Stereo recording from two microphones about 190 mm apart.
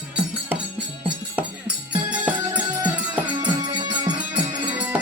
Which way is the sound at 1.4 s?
5° right (ahead or behind).